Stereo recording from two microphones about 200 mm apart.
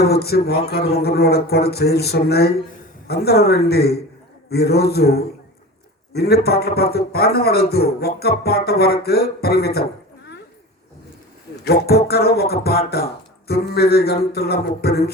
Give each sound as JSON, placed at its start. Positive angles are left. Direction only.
{"t": 0.0, "sound": "a man's voice", "side_deg": 50}
{"t": 11.6, "sound": "a man's voice", "side_deg": 50}